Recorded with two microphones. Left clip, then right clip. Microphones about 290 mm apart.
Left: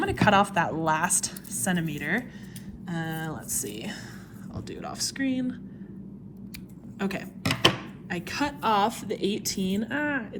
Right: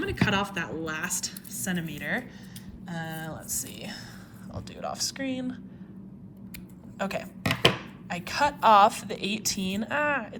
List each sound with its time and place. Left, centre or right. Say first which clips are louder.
0.0 s a woman's voice: left 6 dB; centre
7.0 s a woman's voice: right 1 dB; centre